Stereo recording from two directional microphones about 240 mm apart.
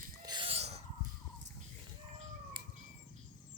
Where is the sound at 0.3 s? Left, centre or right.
Right.